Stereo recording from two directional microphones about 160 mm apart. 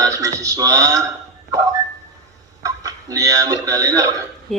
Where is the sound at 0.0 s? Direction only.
20° right (ahead or behind).